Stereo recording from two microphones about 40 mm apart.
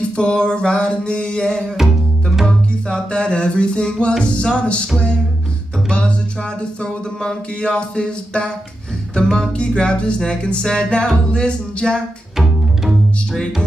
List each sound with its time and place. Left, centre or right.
0.0 s music: left
1.8 s music: centre
2.4 s music: left
5.9 s music: left
9.6 s music: left